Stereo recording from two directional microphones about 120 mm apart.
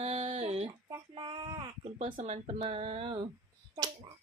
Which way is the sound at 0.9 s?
40° right (ahead or behind).